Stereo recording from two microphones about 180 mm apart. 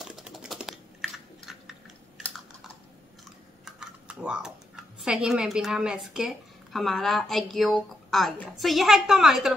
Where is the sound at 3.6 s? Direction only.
5° right (ahead or behind).